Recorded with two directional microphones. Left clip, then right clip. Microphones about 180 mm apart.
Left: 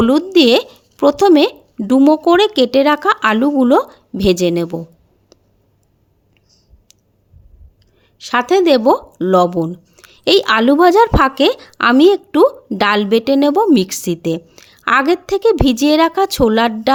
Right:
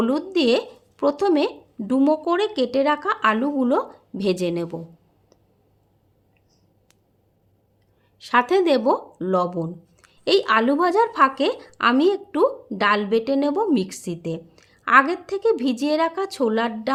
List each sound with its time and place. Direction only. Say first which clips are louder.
0.0 s speech: left 10 dB; 45° left (ahead or behind)
5.3 s tick: left 10 dB; 30° left (ahead or behind)
8.2 s speech: left 5 dB; 30° left (ahead or behind)